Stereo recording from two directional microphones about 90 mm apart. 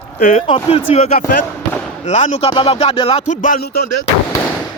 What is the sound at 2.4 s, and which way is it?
Speech, 70° left (ahead or behind).